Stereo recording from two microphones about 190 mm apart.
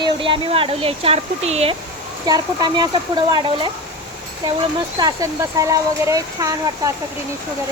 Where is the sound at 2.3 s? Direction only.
20° right (ahead or behind).